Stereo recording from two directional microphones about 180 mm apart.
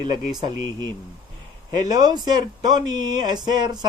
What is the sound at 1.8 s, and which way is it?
Speech, 20° right (ahead or behind).